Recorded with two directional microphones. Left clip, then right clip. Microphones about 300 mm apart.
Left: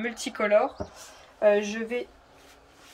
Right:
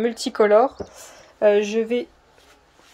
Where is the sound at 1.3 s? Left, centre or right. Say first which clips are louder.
Right 5 dB; right.